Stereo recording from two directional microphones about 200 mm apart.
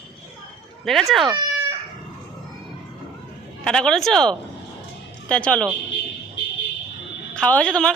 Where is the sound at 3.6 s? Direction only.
5° left (ahead or behind).